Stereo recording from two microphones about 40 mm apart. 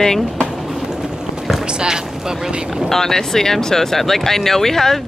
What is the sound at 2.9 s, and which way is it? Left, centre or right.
Speech, centre.